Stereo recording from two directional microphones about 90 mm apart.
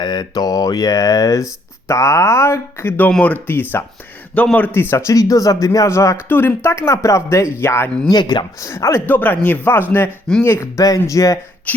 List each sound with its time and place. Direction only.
0.0 s speech: 50° left (ahead or behind); by 3.1 s 25° left (ahead or behind)
3.1 s speech: 15° left (ahead or behind); by 6.1 s 35° left (ahead or behind)
6.2 s speech: 25° left (ahead or behind)
8.1 s speech: 55° left (ahead or behind)
8.5 s speech: 30° left (ahead or behind)
9.0 s speech: 20° left (ahead or behind); by 11.3 s 40° left (ahead or behind)